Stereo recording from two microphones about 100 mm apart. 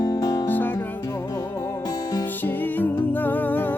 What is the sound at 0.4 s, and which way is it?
Music, 20° left (ahead or behind).